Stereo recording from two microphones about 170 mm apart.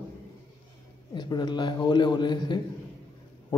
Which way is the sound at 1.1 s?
25° left (ahead or behind).